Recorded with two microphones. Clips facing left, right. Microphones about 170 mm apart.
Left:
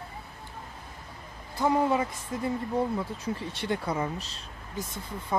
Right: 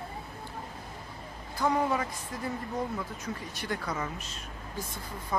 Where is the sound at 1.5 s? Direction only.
25° left (ahead or behind).